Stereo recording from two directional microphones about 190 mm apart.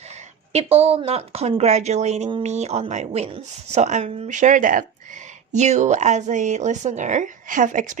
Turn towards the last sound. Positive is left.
turn(degrees=-40)  # may be behind; listen again after turning